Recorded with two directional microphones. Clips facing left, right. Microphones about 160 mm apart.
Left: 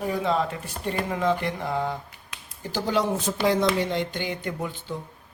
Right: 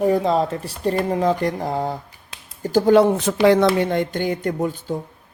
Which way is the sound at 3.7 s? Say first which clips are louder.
Right 6 dB; 50° right (ahead or behind).